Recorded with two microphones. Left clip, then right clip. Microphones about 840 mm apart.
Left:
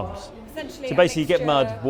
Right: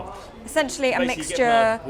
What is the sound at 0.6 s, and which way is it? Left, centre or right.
Speech, right.